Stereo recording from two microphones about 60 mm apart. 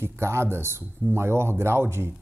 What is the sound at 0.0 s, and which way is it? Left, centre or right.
Speech, right.